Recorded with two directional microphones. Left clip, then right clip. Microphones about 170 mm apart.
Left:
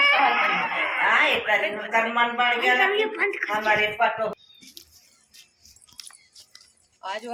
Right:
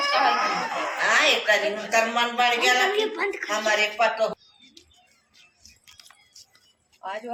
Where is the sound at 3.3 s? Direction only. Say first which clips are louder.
Left 1 dB; 30° right (ahead or behind).